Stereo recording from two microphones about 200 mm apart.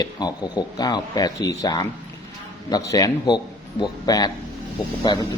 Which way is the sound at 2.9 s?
20° left (ahead or behind).